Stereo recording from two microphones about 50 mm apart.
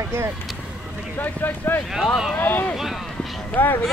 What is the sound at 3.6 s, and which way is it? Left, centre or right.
Speech, left.